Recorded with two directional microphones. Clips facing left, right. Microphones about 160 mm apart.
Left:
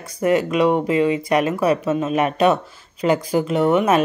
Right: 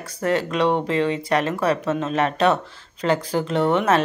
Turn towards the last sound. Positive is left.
turn(degrees=10)  # may be behind; listen again after turning